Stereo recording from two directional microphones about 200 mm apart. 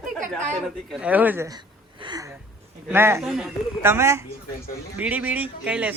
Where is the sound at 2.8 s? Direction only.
10° right (ahead or behind).